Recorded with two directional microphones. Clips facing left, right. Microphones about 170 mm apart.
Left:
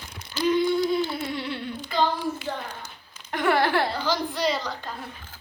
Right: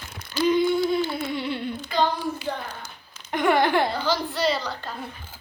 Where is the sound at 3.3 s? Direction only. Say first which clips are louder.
Right 2 dB; 20° right (ahead or behind).